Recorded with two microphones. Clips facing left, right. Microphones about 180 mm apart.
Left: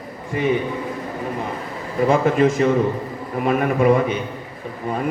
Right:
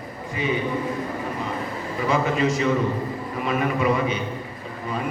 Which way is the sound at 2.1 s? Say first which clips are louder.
Left 5 dB; 50° left (ahead or behind).